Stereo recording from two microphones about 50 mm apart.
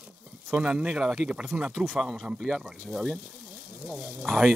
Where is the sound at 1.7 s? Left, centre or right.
Centre.